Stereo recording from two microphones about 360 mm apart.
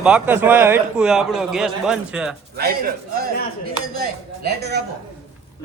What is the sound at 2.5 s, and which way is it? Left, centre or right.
Dishes, right.